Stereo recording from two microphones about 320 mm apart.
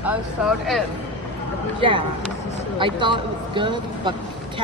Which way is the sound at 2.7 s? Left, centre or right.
Centre.